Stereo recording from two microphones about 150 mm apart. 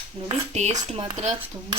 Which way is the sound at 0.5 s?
50° right (ahead or behind).